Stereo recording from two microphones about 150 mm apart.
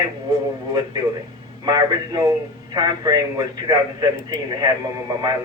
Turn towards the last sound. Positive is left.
turn(degrees=-25)  # may be behind; listen again after turning